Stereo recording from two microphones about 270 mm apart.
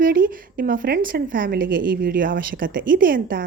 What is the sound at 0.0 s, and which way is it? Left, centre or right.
A woman's voice, right.